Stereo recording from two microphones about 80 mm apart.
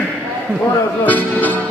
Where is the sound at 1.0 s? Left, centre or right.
Left.